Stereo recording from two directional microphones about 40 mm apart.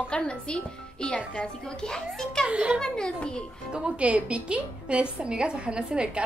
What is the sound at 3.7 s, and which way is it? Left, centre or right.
A woman's voice, right.